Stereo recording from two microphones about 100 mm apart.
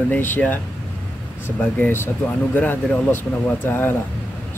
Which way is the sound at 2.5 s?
20° left (ahead or behind).